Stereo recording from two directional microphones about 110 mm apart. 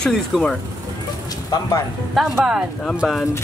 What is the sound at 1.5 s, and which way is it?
Speech, 30° left (ahead or behind).